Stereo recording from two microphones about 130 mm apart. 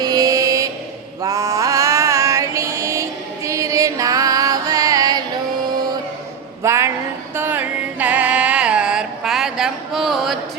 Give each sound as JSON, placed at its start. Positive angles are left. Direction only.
{"t": 0.0, "sound": "vehicle", "side_deg": -30}
{"t": 1.2, "sound": "mantra", "side_deg": -25}
{"t": 6.6, "sound": "a sound", "side_deg": -20}
{"t": 7.3, "sound": "music", "side_deg": -15}